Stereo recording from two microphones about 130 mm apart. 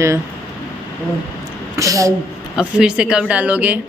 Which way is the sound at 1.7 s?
25° right (ahead or behind).